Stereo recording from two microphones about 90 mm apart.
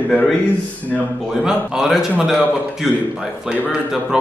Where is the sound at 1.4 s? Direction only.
5° right (ahead or behind).